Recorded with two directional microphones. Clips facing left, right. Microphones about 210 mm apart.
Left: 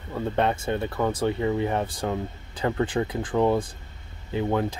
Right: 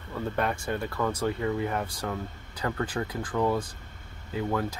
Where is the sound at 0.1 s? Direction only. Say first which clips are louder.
Left 5 dB; 25° left (ahead or behind).